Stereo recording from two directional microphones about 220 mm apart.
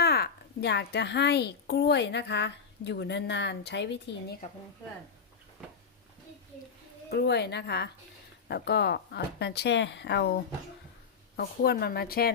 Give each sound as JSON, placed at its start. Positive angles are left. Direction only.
{"t": 0.0, "sound": "a woman's voice", "side_deg": 45}
{"t": 7.1, "sound": "a woman's voice", "side_deg": 50}